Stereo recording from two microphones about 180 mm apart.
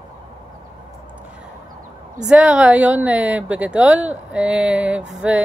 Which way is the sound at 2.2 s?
5° right (ahead or behind).